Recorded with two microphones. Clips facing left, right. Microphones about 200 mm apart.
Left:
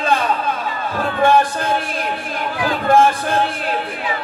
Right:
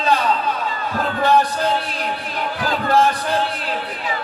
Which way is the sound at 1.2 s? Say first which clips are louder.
Left 2 dB; 50° left (ahead or behind).